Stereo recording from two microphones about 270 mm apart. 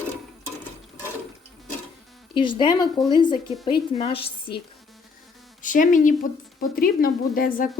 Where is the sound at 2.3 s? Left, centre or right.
Centre.